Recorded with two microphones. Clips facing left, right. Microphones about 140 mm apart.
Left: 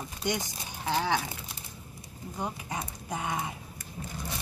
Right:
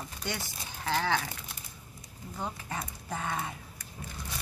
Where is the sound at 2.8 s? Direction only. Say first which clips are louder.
Left 1 dB; 15° left (ahead or behind).